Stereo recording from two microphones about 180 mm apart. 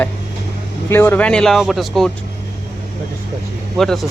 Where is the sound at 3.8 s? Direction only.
Centre (ahead or behind).